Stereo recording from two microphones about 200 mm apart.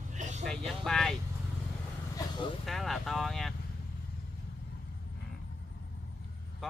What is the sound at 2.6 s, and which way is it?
Speech, centre (ahead or behind).